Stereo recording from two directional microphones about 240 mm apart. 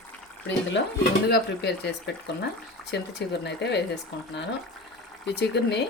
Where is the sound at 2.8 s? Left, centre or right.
Centre.